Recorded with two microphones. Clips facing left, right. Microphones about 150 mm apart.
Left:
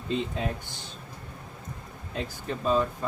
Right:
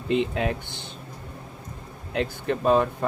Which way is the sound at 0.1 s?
70° right (ahead or behind).